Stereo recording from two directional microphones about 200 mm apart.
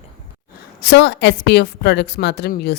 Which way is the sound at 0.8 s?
55° left (ahead or behind).